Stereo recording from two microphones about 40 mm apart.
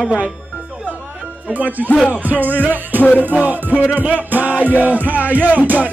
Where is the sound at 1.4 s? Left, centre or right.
Right.